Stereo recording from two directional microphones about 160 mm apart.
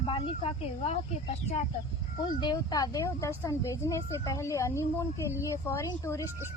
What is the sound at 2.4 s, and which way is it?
Speech, 25° left (ahead or behind).